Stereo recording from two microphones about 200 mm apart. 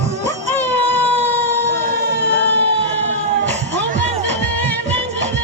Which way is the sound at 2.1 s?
60° right (ahead or behind).